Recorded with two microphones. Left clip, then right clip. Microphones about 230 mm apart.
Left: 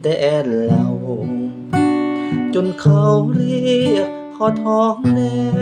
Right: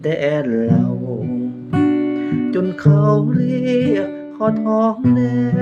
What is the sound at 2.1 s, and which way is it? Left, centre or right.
Guitar, centre.